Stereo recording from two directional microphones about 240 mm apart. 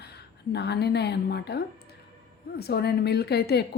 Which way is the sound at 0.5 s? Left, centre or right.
Left.